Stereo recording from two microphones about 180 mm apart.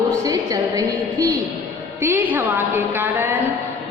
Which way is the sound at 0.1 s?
20° right (ahead or behind).